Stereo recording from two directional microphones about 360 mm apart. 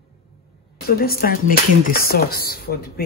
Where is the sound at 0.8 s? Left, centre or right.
Left.